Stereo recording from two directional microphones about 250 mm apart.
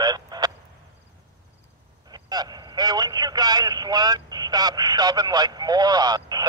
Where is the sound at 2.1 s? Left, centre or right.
Centre.